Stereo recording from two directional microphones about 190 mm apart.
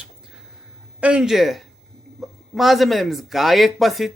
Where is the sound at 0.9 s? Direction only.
5° right (ahead or behind).